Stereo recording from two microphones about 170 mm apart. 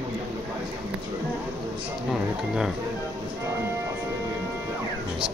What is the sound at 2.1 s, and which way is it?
Speech, centre (ahead or behind).